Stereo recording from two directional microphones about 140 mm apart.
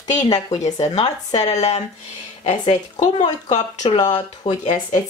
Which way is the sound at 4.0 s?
30° left (ahead or behind).